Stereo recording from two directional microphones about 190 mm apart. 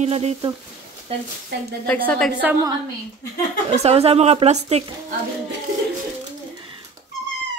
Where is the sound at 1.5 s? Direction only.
65° right (ahead or behind).